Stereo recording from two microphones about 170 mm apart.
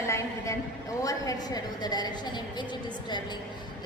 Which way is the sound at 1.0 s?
20° left (ahead or behind).